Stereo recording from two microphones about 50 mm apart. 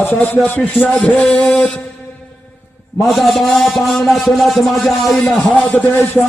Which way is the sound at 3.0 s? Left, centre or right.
Centre.